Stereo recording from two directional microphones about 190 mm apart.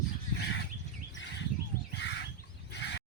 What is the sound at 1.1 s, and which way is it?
Bird, 70° left (ahead or behind).